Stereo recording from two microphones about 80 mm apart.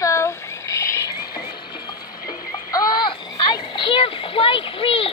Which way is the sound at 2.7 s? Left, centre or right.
Left.